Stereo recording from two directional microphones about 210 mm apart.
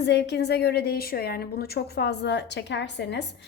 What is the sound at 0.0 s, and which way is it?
A woman's voice, 55° left (ahead or behind).